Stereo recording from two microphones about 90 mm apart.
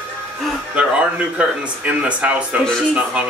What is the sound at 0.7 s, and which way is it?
Speech, 15° right (ahead or behind).